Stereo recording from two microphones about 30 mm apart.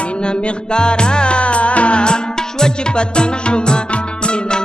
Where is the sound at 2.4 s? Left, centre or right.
Left.